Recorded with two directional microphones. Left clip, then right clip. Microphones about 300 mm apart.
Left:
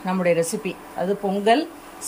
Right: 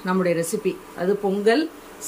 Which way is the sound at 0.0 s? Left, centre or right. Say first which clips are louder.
Left 2 dB; centre.